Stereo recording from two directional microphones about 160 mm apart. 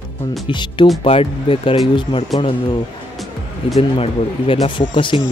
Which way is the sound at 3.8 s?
35° left (ahead or behind).